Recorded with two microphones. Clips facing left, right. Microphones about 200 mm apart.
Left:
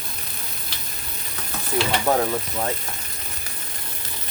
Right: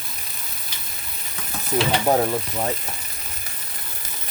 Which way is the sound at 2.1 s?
20° right (ahead or behind).